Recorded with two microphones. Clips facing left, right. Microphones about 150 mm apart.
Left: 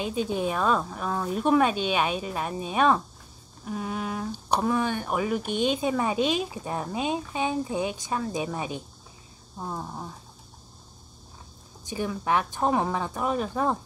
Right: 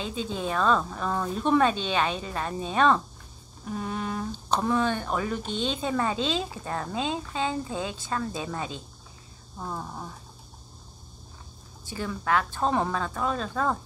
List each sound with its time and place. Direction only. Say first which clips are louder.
0.0 s speech: left 4 dB; 15° left (ahead or behind)
11.8 s speech: left 2 dB; 15° left (ahead or behind)